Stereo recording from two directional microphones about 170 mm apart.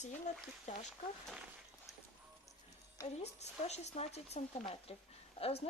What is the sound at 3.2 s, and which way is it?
Speech, 40° left (ahead or behind).